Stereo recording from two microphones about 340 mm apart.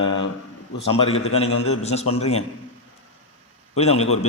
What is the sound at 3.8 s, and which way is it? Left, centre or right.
Mantra, centre.